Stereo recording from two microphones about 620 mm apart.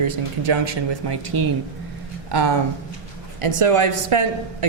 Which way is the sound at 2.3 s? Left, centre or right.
Right.